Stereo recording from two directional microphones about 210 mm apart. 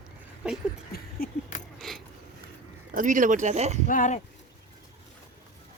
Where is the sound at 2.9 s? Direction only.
40° right (ahead or behind).